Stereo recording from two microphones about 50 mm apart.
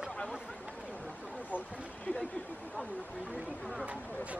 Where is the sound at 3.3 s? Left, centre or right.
Right.